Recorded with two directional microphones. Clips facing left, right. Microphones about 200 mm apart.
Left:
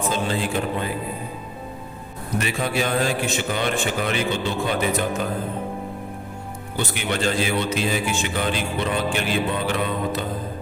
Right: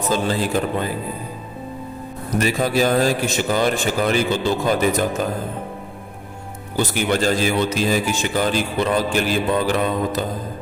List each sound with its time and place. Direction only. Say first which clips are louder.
0.1 s a man's voice: right 7 dB; 40° right (ahead or behind)
2.4 s a man's voice: right 6 dB; 40° right (ahead or behind)
6.7 s a man's voice: right 6 dB; 40° right (ahead or behind)